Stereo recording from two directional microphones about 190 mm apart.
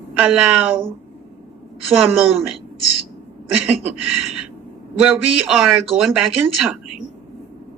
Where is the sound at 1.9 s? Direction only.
10° right (ahead or behind).